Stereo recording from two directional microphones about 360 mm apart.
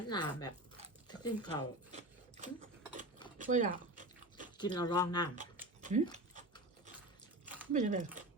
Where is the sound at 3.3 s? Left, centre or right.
Right.